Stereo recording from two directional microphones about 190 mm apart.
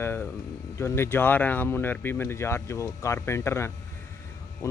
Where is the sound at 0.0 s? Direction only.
10° left (ahead or behind).